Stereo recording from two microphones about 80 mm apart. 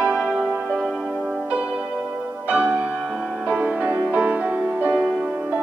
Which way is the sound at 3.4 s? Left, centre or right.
Centre.